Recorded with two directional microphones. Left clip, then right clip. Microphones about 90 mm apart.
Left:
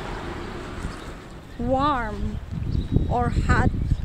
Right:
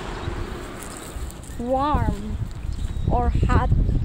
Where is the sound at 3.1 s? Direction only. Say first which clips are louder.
Even; 40° left (ahead or behind).